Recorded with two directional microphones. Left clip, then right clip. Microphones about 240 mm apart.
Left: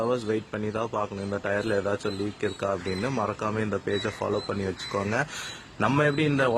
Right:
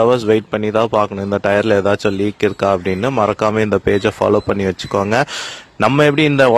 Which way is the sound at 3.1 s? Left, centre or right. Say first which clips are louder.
Right 16 dB; right.